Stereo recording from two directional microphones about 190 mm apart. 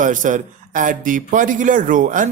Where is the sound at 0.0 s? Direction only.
40° right (ahead or behind).